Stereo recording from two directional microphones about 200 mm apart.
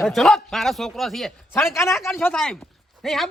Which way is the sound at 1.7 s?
15° left (ahead or behind).